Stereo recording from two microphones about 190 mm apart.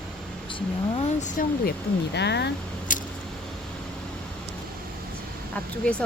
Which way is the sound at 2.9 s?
45° left (ahead or behind).